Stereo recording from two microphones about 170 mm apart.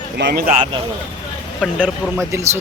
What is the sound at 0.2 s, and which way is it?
Speech, 75° right (ahead or behind).